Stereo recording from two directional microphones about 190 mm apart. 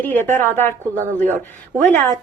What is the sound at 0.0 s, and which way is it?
Speech, 10° left (ahead or behind).